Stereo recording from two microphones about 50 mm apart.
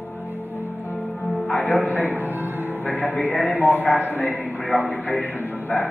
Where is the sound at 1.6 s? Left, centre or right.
Left.